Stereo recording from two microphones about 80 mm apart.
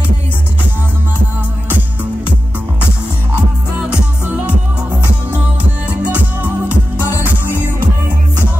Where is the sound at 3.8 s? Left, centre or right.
Centre.